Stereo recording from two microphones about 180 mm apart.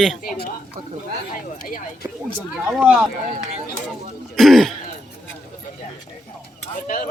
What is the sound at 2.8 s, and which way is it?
Speech, 5° right (ahead or behind).